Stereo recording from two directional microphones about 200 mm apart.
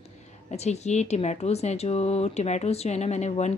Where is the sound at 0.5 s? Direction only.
35° left (ahead or behind).